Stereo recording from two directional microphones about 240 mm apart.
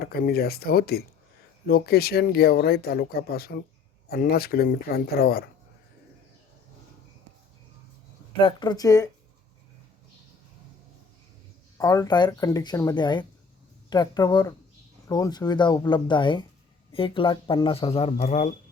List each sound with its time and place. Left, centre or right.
0.0 s speech: left
8.4 s speech: centre
11.8 s speech: centre; by 18.5 s left